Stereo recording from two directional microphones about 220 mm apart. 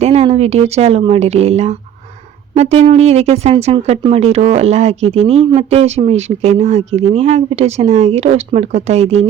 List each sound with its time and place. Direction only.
0.0 s speech: 30° right (ahead or behind)